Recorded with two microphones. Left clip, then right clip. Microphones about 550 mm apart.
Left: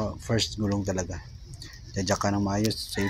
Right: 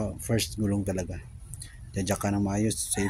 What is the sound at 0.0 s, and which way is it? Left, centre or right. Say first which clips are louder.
Speech: left 2 dB; right.